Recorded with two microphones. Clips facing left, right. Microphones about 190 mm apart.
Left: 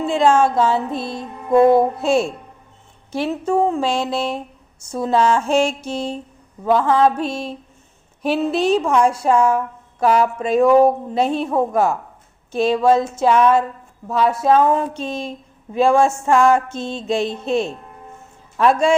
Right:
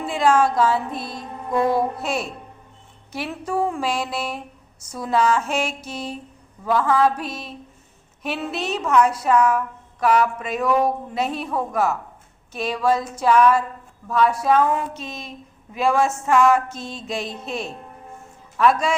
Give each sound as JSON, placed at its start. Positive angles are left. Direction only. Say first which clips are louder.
{"t": 0.0, "sound": "a woman's voice", "louder": "left 3 dB", "side_deg": 25}